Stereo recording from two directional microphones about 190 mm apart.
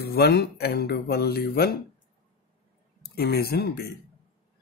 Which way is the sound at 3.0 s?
55° left (ahead or behind).